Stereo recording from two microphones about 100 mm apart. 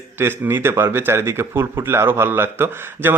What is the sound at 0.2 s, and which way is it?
Speech, 20° right (ahead or behind).